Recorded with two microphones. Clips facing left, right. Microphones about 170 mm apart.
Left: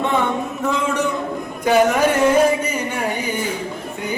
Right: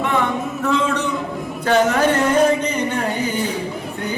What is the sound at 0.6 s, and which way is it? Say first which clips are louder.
Music: right 1 dB; 15° left (ahead or behind).